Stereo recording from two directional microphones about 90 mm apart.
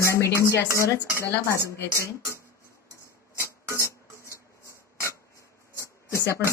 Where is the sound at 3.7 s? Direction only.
30° left (ahead or behind).